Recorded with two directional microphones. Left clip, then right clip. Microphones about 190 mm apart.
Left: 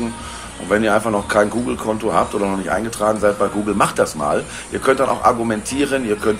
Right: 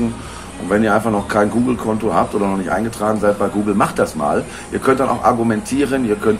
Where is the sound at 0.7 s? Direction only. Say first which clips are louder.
Right 1 dB; 20° left (ahead or behind).